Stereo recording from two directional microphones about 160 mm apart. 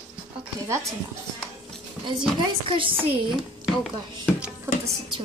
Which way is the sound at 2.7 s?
35° right (ahead or behind).